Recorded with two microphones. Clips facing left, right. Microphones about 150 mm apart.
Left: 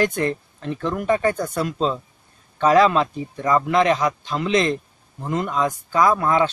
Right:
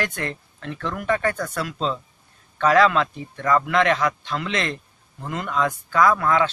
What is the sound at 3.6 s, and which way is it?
Speech, 30° left (ahead or behind).